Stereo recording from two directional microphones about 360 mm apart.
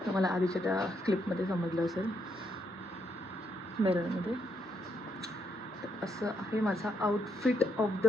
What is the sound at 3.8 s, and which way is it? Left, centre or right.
Speech, centre.